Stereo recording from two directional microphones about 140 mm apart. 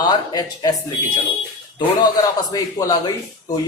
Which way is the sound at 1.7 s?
30° left (ahead or behind).